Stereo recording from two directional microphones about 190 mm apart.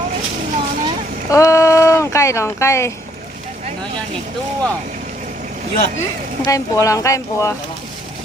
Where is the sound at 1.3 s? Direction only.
15° left (ahead or behind).